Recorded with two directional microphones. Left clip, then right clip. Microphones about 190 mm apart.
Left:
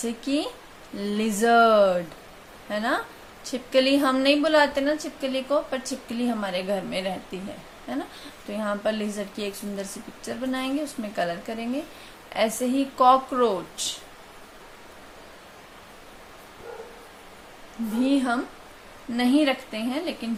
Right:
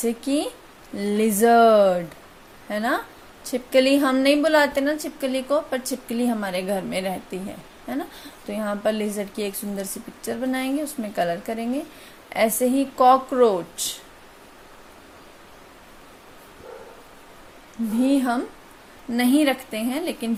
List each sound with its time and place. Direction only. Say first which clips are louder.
0.0 s a woman's voice: right 3 dB; 30° right (ahead or behind)
18.0 s speech: right 2 dB; 30° right (ahead or behind)
19.1 s a woman's voice: right 2 dB; 40° right (ahead or behind)